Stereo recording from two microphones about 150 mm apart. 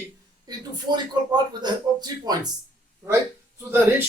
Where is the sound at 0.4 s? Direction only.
30° right (ahead or behind).